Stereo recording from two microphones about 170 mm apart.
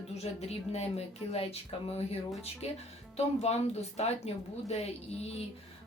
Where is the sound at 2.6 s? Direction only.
40° left (ahead or behind).